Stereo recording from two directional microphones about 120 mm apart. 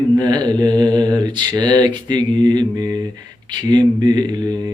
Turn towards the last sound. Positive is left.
turn(degrees=-35)  # may be behind; listen again after turning